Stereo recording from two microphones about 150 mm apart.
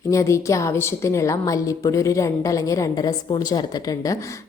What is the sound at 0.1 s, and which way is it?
A woman's voice, 20° left (ahead or behind).